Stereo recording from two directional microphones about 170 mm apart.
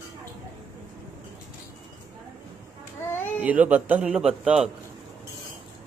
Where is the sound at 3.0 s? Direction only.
15° left (ahead or behind).